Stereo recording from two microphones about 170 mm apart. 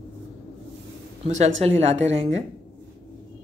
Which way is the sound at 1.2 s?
40° right (ahead or behind).